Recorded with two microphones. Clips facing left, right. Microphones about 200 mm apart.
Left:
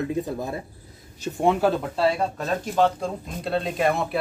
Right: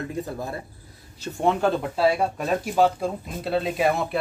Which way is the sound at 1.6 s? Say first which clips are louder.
Even; centre (ahead or behind).